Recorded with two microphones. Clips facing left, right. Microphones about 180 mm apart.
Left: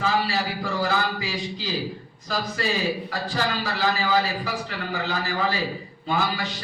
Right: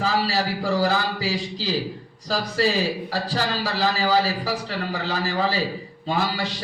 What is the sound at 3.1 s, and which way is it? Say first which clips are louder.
A man's voice: right 2 dB; 35° right (ahead or behind).